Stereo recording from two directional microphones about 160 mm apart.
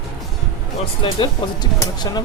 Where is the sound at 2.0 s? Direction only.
25° left (ahead or behind).